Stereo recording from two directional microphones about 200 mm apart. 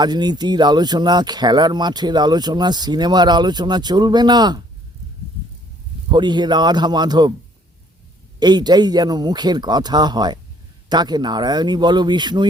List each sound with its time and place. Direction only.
0.0 s speech: 20° right (ahead or behind)
6.1 s speech: 20° right (ahead or behind)
8.4 s speech: 20° right (ahead or behind)